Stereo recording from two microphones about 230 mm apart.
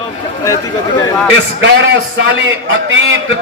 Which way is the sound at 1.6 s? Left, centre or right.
Right.